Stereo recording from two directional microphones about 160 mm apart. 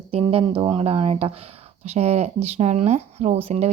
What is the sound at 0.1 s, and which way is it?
Speech, 40° right (ahead or behind).